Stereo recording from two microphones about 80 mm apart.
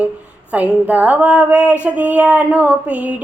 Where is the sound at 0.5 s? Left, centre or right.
Centre.